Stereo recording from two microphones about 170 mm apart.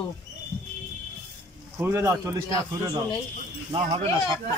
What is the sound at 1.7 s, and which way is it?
Speech, 15° right (ahead or behind).